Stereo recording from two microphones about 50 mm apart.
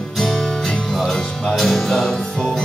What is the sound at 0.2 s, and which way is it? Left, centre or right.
Music, centre.